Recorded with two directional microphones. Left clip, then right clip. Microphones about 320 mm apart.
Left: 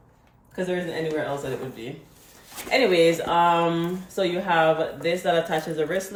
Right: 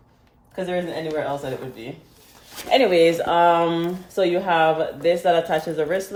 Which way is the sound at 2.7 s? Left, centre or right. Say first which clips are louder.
Right 3 dB; centre.